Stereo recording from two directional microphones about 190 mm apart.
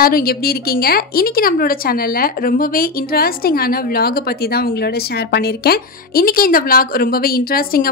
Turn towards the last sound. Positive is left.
turn(degrees=50)  # may be behind; listen again after turning